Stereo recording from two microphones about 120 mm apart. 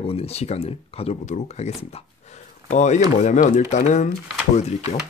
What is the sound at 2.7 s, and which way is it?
Speech, 80° left.